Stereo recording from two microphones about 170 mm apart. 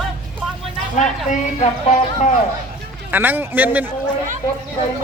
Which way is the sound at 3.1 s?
10° right (ahead or behind).